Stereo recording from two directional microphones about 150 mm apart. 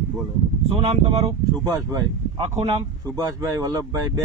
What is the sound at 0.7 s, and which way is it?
Speech, 40° right (ahead or behind).